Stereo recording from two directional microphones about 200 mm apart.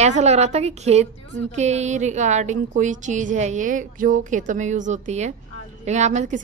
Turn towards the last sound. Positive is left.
turn(degrees=-35)  # may be behind; listen again after turning